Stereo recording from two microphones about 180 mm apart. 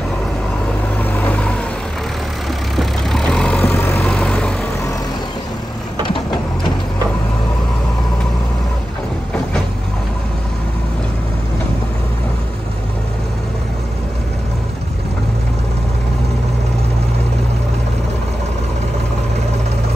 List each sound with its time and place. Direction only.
0.9 s vehicle: 10° left (ahead or behind)
2.7 s vehicle: centre (ahead or behind)